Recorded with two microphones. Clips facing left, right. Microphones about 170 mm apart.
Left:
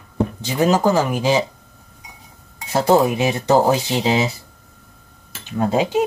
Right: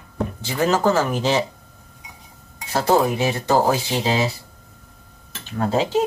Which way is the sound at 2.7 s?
20° left (ahead or behind).